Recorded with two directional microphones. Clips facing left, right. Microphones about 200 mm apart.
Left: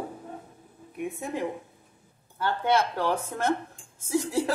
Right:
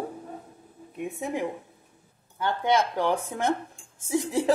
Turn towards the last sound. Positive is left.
turn(degrees=-15)  # may be behind; listen again after turning